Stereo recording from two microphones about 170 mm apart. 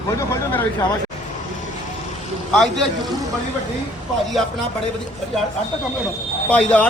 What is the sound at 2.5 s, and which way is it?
Speech, 5° left (ahead or behind).